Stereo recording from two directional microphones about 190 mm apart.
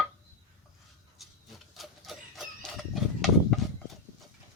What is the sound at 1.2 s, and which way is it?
Printer, centre (ahead or behind).